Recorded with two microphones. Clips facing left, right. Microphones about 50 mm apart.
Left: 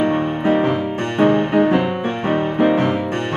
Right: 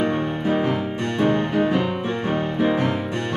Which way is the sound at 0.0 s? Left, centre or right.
Left.